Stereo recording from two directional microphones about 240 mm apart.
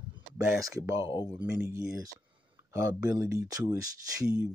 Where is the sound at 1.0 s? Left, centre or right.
Left.